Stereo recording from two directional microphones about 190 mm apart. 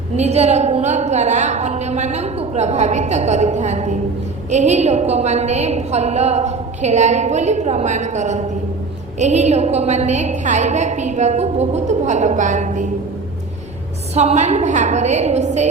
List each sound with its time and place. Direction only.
0.2 s a woman's voice: 35° right (ahead or behind)
14.2 s a woman's voice: 35° right (ahead or behind)